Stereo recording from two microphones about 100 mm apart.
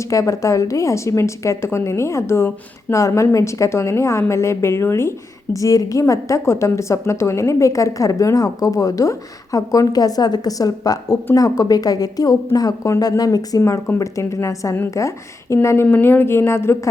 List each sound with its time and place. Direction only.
0.1 s a woman's voice: 35° left (ahead or behind)